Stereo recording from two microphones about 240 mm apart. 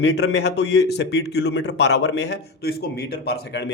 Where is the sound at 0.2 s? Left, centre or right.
Left.